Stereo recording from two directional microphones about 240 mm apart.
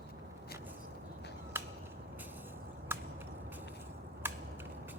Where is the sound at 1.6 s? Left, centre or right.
Centre.